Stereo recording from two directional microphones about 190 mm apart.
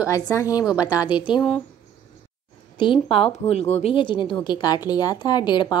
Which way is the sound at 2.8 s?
30° left (ahead or behind).